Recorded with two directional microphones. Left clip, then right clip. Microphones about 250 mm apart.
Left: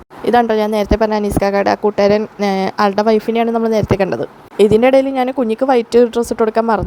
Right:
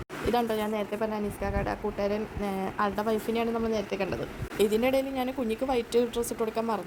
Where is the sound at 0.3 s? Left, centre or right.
Left.